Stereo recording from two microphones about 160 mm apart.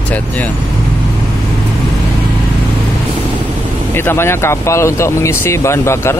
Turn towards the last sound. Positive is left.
turn(degrees=15)  # may be behind; listen again after turning